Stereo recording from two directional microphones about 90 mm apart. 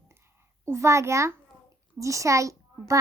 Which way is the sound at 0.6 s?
30° right (ahead or behind).